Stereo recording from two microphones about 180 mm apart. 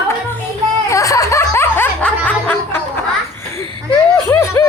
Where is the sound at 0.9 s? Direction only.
20° left (ahead or behind).